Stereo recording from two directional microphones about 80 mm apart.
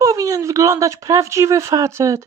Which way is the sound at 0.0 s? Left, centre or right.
Right.